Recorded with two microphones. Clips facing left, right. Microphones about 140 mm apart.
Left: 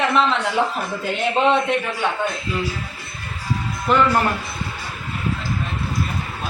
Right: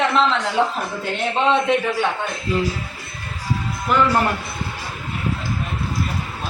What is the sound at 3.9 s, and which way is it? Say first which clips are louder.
Speech: left 1 dB; 5° right (ahead or behind).